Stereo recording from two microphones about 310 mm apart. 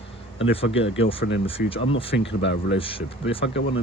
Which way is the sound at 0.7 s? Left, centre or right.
Left.